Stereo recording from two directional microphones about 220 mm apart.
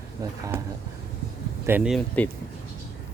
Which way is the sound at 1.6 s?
5° right (ahead or behind).